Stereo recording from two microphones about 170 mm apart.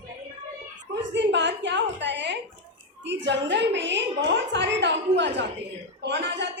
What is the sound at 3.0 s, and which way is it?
A woman's voice, 90° right.